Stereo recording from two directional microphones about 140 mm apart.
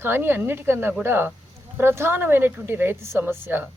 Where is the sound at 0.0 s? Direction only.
15° right (ahead or behind).